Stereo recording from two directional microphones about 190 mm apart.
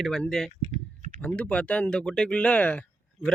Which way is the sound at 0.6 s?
40° right (ahead or behind).